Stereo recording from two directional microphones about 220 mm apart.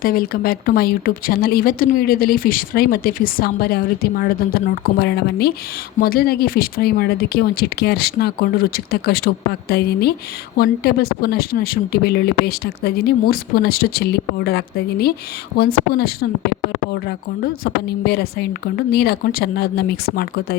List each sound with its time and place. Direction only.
0.0 s speech: 40° left (ahead or behind)